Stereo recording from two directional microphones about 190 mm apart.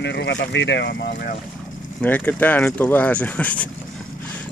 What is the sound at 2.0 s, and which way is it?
Speech, 10° left (ahead or behind).